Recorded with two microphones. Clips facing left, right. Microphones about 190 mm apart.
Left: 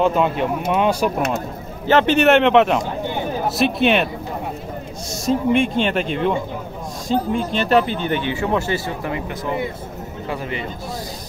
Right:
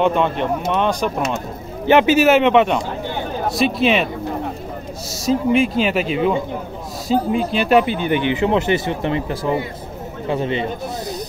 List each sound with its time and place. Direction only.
0.0 s speech: 5° left (ahead or behind)
1.9 s speech: 15° right (ahead or behind)
2.1 s speech: centre (ahead or behind)
5.1 s speech: centre (ahead or behind); by 10.7 s 25° right (ahead or behind)